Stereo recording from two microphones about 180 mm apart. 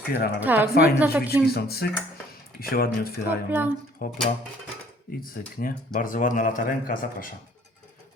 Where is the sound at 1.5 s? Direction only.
60° left (ahead or behind).